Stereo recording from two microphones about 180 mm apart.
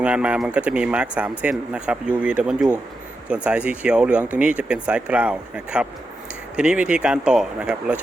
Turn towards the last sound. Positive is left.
turn(degrees=-5)  # may be behind; listen again after turning